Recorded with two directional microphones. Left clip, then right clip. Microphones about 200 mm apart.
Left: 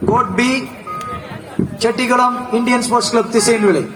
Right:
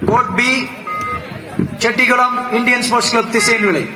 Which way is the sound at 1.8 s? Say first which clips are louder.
Right 1 dB; 15° right (ahead or behind).